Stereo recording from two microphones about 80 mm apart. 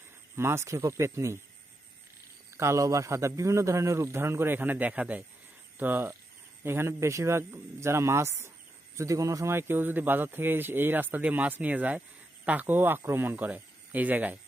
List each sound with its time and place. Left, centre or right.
0.3 s speech: right
2.6 s speech: right